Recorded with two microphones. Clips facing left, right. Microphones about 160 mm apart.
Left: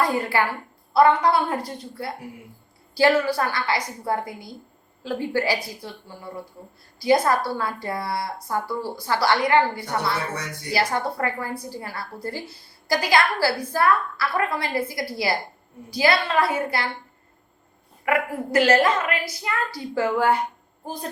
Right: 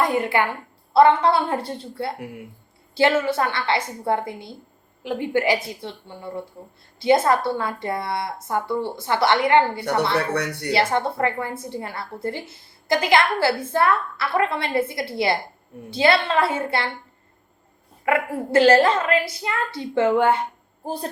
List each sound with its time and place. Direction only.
0.0 s a woman's voice: 20° right (ahead or behind)
10.1 s speech: 65° right (ahead or behind)
10.7 s a woman's voice: 25° right (ahead or behind)
18.0 s a woman's voice: 25° right (ahead or behind)
20.8 s a sound: 30° right (ahead or behind)